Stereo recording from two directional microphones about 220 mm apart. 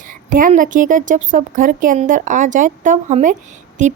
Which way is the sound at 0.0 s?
40° right (ahead or behind).